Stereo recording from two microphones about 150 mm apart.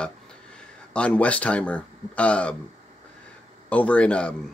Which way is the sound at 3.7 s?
10° left (ahead or behind).